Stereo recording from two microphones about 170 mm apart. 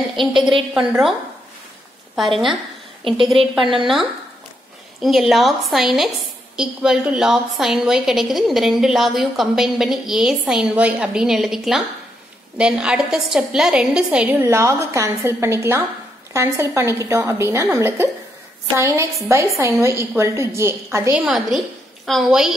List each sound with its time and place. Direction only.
0.4 s a woman's voice: centre (ahead or behind)
2.1 s a woman's voice: centre (ahead or behind)
3.0 s a woman's voice: 30° right (ahead or behind)
3.8 s a woman's voice: centre (ahead or behind)
14.4 s a woman's voice: 15° right (ahead or behind)
21.1 s a woman's voice: centre (ahead or behind)